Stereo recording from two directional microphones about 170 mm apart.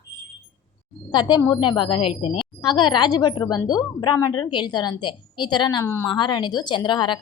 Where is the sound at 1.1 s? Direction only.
25° left (ahead or behind).